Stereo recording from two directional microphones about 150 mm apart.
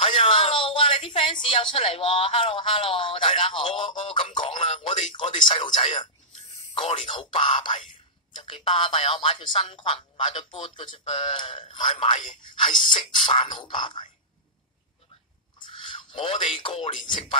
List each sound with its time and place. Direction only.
0.0 s speech: 40° left (ahead or behind)
15.6 s a man's voice: 35° left (ahead or behind)